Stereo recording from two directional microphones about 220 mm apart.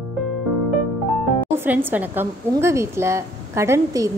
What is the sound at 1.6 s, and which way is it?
A woman's voice, 10° right (ahead or behind).